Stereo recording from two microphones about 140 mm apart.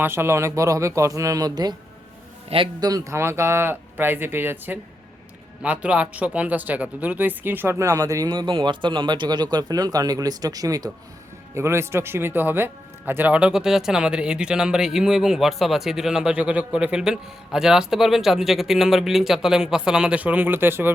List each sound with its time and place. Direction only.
0.0 s speech: 15° right (ahead or behind)
2.5 s a man's voice: 45° right (ahead or behind)
2.8 s a man's voice: 25° right (ahead or behind)